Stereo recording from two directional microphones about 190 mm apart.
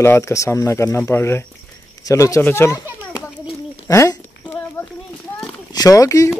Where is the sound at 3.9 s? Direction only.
15° left (ahead or behind).